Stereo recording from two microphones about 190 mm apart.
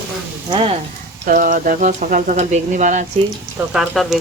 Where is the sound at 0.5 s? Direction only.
30° right (ahead or behind).